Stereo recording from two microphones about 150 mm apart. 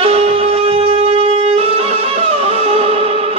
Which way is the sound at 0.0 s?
40° right (ahead or behind).